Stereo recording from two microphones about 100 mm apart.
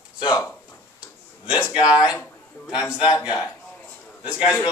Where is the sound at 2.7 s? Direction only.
10° right (ahead or behind).